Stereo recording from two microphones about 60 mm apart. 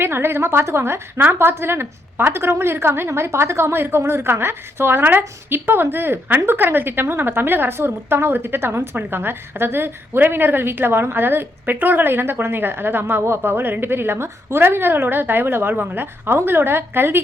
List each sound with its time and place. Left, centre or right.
0.0 s a woman's voice: right